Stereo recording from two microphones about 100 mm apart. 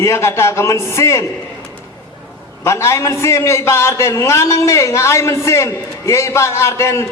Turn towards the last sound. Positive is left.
turn(degrees=30)  # may be behind; listen again after turning